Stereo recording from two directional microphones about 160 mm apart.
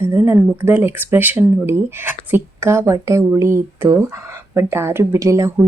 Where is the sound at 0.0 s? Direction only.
15° right (ahead or behind).